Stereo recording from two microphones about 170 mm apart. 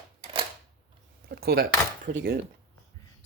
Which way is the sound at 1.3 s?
65° right (ahead or behind).